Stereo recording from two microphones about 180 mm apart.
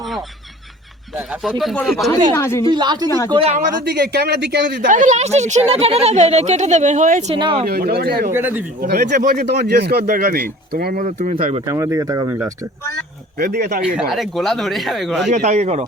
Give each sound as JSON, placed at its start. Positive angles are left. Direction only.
{"t": 1.5, "sound": "speech", "side_deg": 0}
{"t": 2.3, "sound": "speech", "side_deg": 15}
{"t": 2.6, "sound": "a woman's voice", "side_deg": -25}
{"t": 3.9, "sound": "speech", "side_deg": -65}
{"t": 4.9, "sound": "a woman's voice", "side_deg": -45}
{"t": 7.3, "sound": "speech", "side_deg": -25}
{"t": 7.7, "sound": "a man's voice", "side_deg": -60}
{"t": 8.3, "sound": "speech", "side_deg": -10}
{"t": 8.8, "sound": "a man's voice", "side_deg": -60}
{"t": 11.0, "sound": "a woman's voice", "side_deg": -40}
{"t": 11.6, "sound": "speech", "side_deg": -15}
{"t": 13.4, "sound": "a man's voice", "side_deg": -60}
{"t": 13.8, "sound": "speech", "side_deg": -5}
{"t": 15.4, "sound": "a woman's voice", "side_deg": -40}